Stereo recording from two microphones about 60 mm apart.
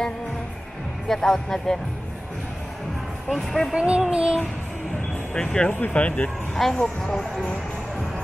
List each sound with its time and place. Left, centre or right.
1.0 s speech: centre
3.3 s speech: centre
3.7 s child singing: centre
4.1 s music: centre
5.3 s speech: centre
5.8 s speech: left
6.5 s speech: centre